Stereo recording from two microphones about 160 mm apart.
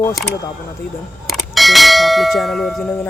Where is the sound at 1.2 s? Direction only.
Centre (ahead or behind).